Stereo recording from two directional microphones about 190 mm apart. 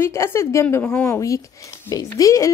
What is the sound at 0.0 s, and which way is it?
A woman's voice, 15° left (ahead or behind).